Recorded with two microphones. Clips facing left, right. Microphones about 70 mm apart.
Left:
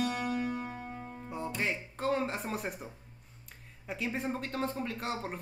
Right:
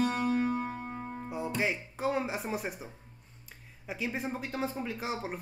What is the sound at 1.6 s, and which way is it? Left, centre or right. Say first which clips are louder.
Speech: right 1 dB; centre.